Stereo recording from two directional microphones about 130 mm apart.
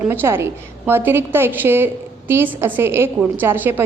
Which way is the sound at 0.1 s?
20° right (ahead or behind).